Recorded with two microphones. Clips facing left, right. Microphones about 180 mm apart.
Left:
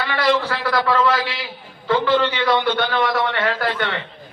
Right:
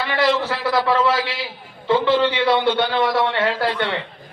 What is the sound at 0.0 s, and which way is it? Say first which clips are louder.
A man's voice: even; 25° right (ahead or behind).